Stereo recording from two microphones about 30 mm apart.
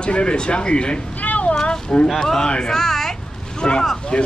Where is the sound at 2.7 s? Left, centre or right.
Centre.